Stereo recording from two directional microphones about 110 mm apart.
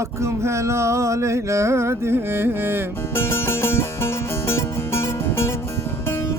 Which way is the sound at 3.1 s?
20° left (ahead or behind).